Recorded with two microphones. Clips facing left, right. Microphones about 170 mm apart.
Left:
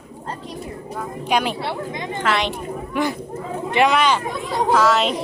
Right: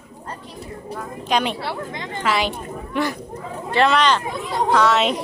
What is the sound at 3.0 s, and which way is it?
Speech, 10° left (ahead or behind).